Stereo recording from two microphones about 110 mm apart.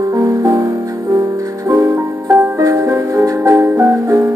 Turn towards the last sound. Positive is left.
turn(degrees=-25)  # may be behind; listen again after turning